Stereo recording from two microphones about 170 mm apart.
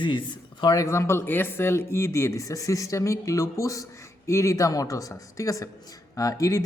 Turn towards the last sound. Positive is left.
turn(degrees=20)  # may be behind; listen again after turning